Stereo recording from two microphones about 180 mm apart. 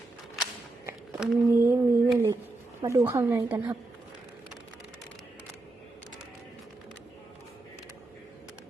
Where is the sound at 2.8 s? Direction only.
15° right (ahead or behind).